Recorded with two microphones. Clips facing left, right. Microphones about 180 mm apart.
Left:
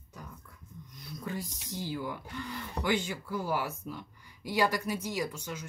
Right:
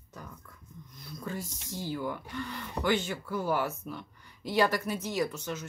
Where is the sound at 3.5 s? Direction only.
60° right (ahead or behind).